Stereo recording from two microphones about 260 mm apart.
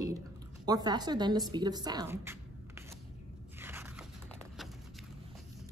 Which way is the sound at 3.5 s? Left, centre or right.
Centre.